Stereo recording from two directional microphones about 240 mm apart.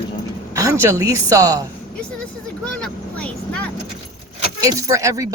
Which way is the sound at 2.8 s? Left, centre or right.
Centre.